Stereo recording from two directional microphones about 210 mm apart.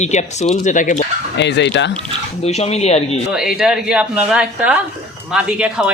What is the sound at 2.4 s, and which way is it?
Speech, 30° left (ahead or behind).